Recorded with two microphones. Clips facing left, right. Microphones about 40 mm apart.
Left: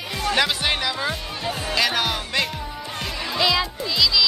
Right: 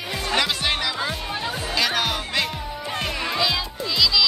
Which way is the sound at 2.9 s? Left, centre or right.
Right.